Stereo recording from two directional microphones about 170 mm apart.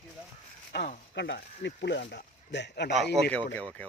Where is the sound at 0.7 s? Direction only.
75° left (ahead or behind).